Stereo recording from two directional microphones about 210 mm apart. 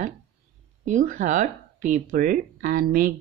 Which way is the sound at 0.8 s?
35° right (ahead or behind).